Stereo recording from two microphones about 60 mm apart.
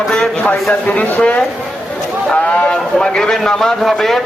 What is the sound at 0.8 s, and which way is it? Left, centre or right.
A man's voice, left.